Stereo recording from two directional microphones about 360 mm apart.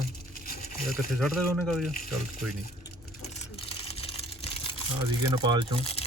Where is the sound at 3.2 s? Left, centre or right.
Centre.